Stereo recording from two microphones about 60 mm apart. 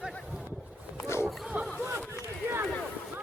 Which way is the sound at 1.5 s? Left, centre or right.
Right.